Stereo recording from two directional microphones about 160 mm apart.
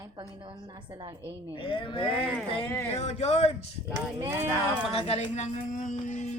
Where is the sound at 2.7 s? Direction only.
10° left (ahead or behind).